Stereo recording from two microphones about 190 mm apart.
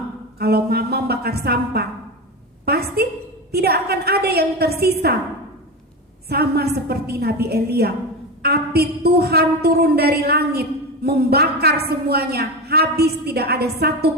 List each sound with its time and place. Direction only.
0.3 s a woman's voice: 55° right (ahead or behind)
6.2 s a woman's voice: 55° right (ahead or behind)